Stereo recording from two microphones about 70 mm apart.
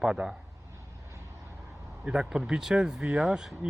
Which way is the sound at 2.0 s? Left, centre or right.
Centre.